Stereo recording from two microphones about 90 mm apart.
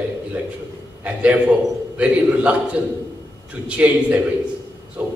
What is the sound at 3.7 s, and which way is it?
A man's voice, 15° right (ahead or behind).